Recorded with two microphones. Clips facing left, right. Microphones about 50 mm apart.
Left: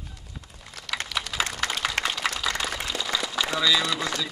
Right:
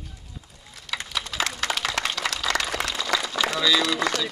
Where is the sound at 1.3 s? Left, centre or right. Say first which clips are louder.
Right 1 dB; centre.